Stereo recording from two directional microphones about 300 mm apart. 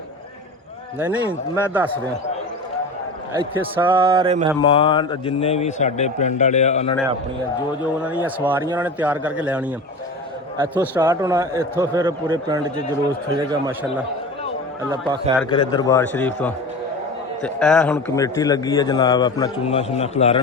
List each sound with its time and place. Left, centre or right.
0.9 s a man's voice: centre
3.3 s a man's voice: centre
4.6 s a man's voice: centre
8.0 s a man's voice: centre
14.8 s a man's voice: centre
15.4 s a man's voice: centre